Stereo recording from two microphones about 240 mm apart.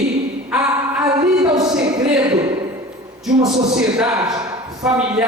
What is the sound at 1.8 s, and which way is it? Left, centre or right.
Speech, centre.